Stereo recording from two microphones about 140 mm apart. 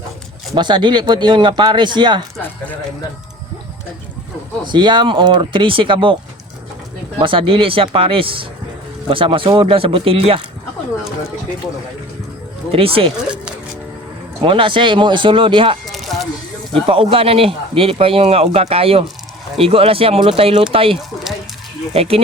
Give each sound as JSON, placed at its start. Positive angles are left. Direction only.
{"t": 0.5, "sound": "speech", "side_deg": -35}
{"t": 4.6, "sound": "speech", "side_deg": -35}
{"t": 7.2, "sound": "speech", "side_deg": -40}
{"t": 12.7, "sound": "speech", "side_deg": -40}
{"t": 14.4, "sound": "speech", "side_deg": -40}
{"t": 15.9, "sound": "a sound", "side_deg": 0}
{"t": 16.8, "sound": "speech", "side_deg": -40}